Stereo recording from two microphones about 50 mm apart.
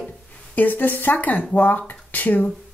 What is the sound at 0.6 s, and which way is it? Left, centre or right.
Speech, left.